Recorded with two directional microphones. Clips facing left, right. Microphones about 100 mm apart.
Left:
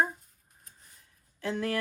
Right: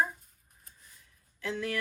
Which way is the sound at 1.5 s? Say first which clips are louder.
Left 3 dB; 40° left (ahead or behind).